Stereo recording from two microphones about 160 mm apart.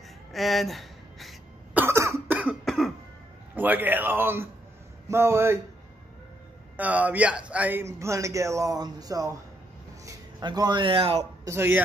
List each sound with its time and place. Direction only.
0.3 s throat clearing: centre (ahead or behind)
1.8 s cough: 15° right (ahead or behind)
2.6 s cough: centre (ahead or behind)
3.5 s a man's voice: 10° right (ahead or behind)
6.8 s a man's voice: 10° right (ahead or behind); by 11.2 s 30° right (ahead or behind)
11.4 s a man's voice: 15° right (ahead or behind)